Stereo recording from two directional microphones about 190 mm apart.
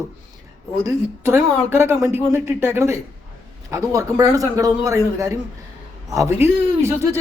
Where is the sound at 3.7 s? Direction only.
15° right (ahead or behind).